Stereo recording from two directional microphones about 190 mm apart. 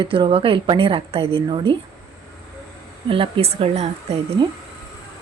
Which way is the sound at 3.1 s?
30° right (ahead or behind).